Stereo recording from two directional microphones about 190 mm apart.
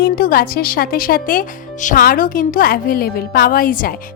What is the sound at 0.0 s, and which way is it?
A woman's voice, 50° left (ahead or behind).